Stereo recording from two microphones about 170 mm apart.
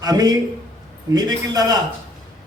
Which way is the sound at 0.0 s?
20° right (ahead or behind).